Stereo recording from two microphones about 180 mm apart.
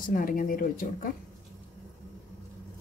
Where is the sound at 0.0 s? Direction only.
50° left (ahead or behind).